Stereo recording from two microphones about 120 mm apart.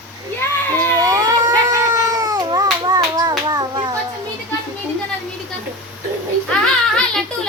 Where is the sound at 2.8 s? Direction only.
35° right (ahead or behind).